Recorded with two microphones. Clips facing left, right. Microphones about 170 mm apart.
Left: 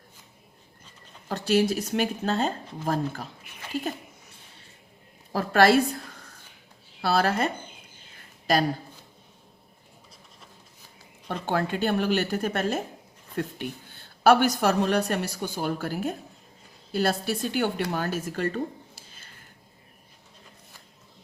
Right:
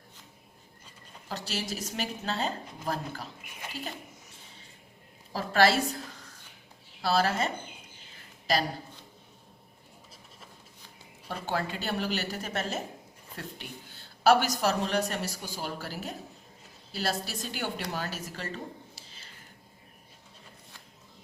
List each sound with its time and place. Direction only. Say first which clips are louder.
1.3 s speech: left 12 dB; 55° left (ahead or behind)
5.3 s a woman's voice: left 5 dB; 55° left (ahead or behind)
7.0 s a woman's voice: left 3 dB; 60° left (ahead or behind)
11.4 s a woman's voice: left 7 dB; 55° left (ahead or behind)
18.9 s a sound: even; 50° left (ahead or behind)